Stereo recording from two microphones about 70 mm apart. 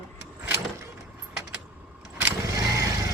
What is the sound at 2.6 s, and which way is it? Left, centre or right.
Vehicle, right.